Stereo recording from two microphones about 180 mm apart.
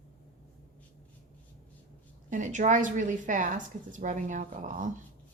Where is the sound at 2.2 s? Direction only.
45° right (ahead or behind).